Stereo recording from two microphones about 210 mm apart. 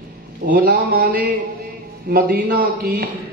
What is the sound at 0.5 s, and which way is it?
Speech, 45° right (ahead or behind).